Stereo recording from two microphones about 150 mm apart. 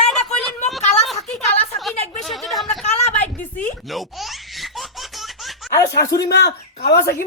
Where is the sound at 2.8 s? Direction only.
50° left (ahead or behind).